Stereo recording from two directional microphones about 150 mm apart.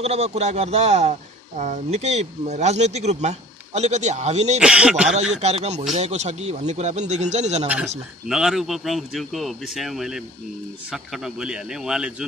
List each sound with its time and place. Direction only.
0.0 s speech: 45° right (ahead or behind)
4.6 s speech: 5° right (ahead or behind)
5.4 s speech: 45° right (ahead or behind)
7.6 s speech: 10° right (ahead or behind)